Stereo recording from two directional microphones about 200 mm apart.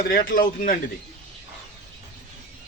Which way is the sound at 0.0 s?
50° left (ahead or behind).